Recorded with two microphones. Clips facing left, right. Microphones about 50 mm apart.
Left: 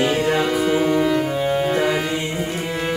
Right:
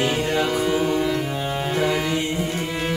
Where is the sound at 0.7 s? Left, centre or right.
Centre.